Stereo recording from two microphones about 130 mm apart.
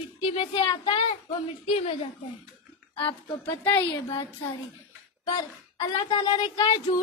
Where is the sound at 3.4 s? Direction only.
15° left (ahead or behind).